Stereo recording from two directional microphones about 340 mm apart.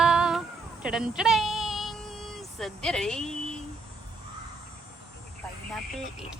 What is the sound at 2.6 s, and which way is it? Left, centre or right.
Speech, centre.